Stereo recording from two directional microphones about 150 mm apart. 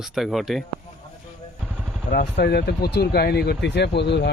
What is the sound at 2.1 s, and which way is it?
Speech, 80° left.